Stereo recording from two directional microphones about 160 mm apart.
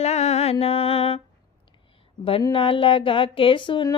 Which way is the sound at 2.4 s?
35° left (ahead or behind).